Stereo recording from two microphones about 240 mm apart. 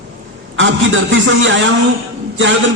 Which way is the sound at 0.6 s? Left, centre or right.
Right.